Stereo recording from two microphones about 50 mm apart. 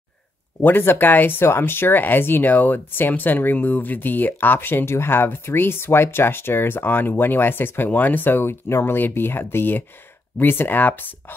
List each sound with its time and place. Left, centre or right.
0.6 s speech: left